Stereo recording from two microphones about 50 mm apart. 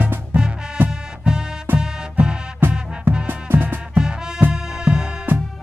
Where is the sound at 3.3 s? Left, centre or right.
Right.